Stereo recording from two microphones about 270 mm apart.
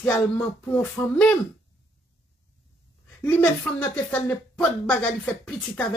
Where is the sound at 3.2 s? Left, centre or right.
Centre.